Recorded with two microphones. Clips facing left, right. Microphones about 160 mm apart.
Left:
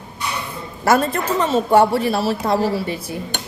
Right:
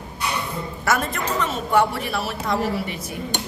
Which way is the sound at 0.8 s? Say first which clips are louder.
Left 7 dB; 30° left (ahead or behind).